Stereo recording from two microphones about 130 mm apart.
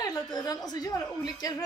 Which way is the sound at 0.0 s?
30° left (ahead or behind).